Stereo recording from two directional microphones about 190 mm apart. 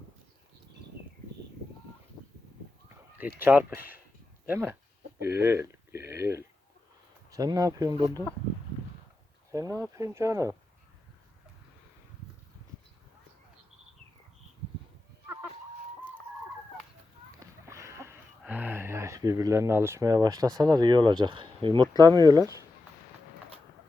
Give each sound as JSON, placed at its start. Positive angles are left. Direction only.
{"t": 2.9, "sound": "speech", "side_deg": -10}
{"t": 9.5, "sound": "speech", "side_deg": -15}
{"t": 17.4, "sound": "speech", "side_deg": -15}